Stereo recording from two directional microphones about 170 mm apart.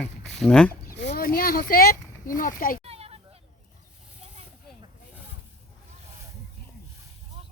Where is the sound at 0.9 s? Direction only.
80° left; by 2.8 s 55° left (ahead or behind).